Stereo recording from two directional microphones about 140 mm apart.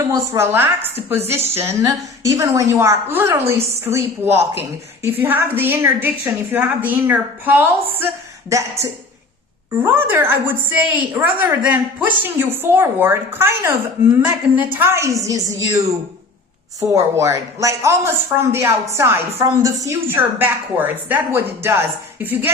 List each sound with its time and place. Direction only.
0.1 s a woman's voice: 15° right (ahead or behind)
16.9 s speech: 20° right (ahead or behind)